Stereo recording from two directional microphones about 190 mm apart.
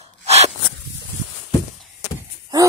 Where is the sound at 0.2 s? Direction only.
35° right (ahead or behind).